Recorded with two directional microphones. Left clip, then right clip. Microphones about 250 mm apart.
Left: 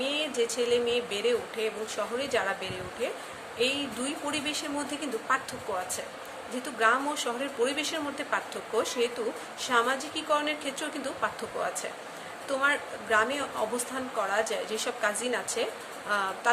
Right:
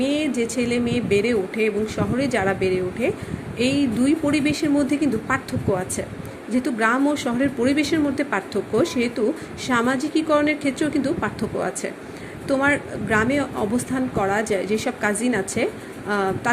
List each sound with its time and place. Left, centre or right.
0.0 s speech: centre
6.6 s speech: centre